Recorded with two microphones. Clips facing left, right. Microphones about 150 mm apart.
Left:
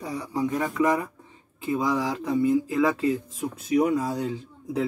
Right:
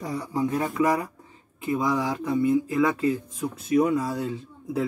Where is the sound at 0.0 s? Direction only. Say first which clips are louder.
Right 1 dB; 40° right (ahead or behind).